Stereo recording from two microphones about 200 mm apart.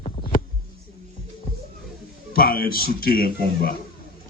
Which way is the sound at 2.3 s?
50° left (ahead or behind).